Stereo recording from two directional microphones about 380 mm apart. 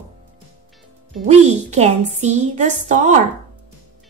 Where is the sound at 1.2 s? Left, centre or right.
Centre.